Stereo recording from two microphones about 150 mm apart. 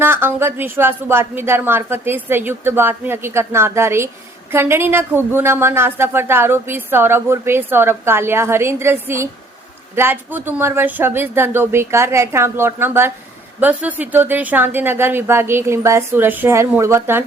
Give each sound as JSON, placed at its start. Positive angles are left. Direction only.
{"t": 0.0, "sound": "a woman's voice", "side_deg": -15}